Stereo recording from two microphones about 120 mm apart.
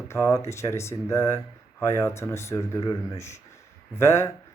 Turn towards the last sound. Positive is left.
turn(degrees=25)  # may be behind; listen again after turning